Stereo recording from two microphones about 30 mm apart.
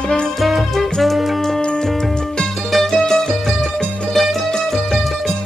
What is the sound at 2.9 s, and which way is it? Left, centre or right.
Music, left.